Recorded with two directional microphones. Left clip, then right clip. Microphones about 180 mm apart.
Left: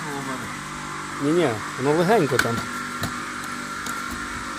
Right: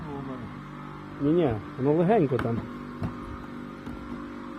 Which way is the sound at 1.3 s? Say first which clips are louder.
Left 4 dB; 5° left (ahead or behind).